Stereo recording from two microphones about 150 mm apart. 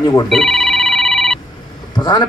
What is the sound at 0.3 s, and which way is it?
Telephone, centre (ahead or behind).